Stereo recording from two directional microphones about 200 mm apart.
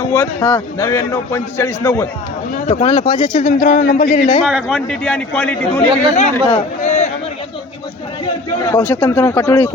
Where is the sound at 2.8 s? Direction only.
25° left (ahead or behind).